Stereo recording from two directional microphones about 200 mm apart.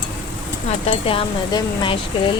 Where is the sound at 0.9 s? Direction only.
25° left (ahead or behind).